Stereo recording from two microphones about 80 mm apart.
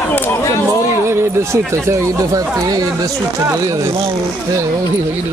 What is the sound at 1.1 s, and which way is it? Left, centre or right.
Speech, right.